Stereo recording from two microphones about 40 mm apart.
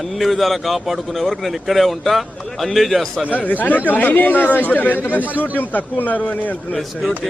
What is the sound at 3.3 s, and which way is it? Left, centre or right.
Speech, left.